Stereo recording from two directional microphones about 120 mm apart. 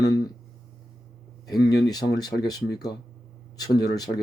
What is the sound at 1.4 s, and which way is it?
Speech, 35° left (ahead or behind).